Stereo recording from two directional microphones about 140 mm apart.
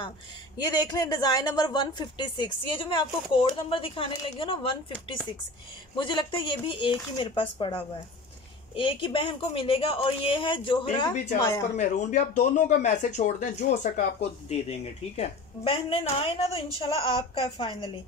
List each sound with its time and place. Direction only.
0.6 s a woman's voice: 30° left (ahead or behind)
11.7 s speech: 60° left (ahead or behind)
14.5 s a woman's voice: 50° left (ahead or behind)